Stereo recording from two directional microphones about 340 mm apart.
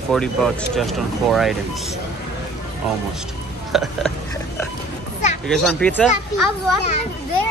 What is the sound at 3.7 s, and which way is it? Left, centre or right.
Speech, centre.